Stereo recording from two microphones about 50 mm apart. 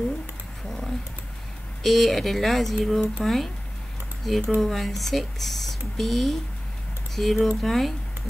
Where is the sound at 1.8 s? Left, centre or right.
Centre.